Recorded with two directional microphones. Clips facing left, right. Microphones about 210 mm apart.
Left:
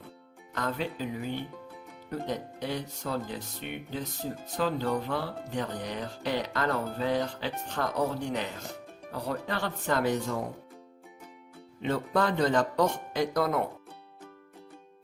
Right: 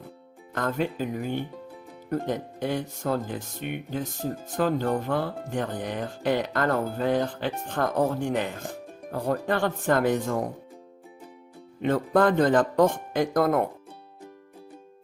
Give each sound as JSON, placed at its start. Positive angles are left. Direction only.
{"t": 0.5, "sound": "speech", "side_deg": -50}
{"t": 11.8, "sound": "speech", "side_deg": -50}